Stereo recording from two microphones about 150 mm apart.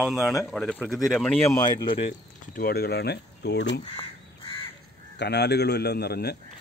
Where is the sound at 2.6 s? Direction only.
90° left.